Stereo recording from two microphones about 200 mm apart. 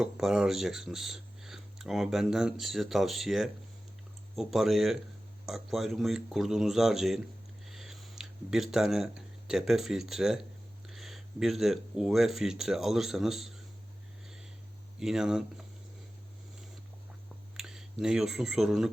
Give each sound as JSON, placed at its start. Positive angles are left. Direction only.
{"t": 0.0, "sound": "speech", "side_deg": 0}
{"t": 7.6, "sound": "a sound", "side_deg": 0}
{"t": 9.5, "sound": "speech", "side_deg": 0}
{"t": 14.9, "sound": "speech", "side_deg": 0}
{"t": 17.6, "sound": "speech", "side_deg": 0}